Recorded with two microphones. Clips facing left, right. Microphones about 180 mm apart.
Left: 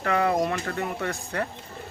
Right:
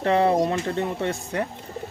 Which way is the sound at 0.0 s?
30° right (ahead or behind).